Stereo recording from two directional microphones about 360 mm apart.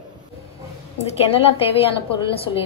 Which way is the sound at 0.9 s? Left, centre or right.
Centre.